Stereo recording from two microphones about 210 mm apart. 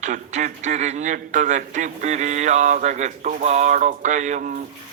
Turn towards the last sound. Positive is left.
turn(degrees=-35)  # may be behind; listen again after turning